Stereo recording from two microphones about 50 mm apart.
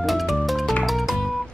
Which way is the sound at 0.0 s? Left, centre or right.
Centre.